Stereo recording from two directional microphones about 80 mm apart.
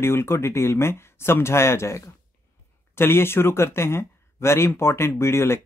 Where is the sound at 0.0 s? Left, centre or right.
Left.